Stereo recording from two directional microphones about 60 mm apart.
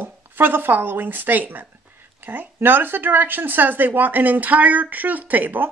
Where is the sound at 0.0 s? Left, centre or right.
Right.